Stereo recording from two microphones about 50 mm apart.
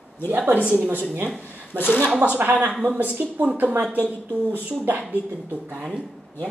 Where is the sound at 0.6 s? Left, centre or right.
Right.